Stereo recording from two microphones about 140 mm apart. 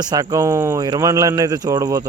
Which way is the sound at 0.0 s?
25° right (ahead or behind).